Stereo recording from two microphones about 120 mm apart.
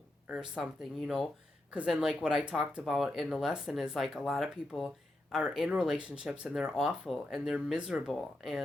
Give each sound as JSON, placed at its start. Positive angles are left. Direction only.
{"t": 0.3, "sound": "speech", "side_deg": -5}